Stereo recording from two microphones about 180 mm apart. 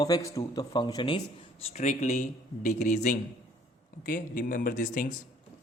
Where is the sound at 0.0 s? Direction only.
20° left (ahead or behind); by 5.1 s 45° left (ahead or behind).